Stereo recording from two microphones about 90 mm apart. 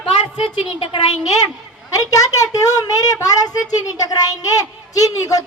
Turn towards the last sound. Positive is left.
turn(degrees=40)  # may be behind; listen again after turning